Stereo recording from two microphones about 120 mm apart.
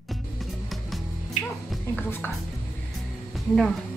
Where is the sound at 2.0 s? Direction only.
15° left (ahead or behind).